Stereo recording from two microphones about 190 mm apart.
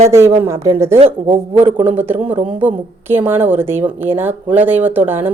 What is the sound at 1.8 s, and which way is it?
A woman's voice, 10° right (ahead or behind).